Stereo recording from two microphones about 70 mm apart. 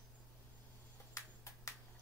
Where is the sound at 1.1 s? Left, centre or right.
Left.